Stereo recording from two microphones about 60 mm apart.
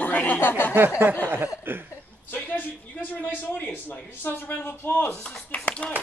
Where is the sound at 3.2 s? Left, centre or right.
Left.